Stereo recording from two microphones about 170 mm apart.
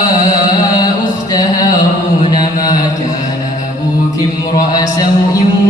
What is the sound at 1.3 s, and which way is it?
Music, 25° left (ahead or behind).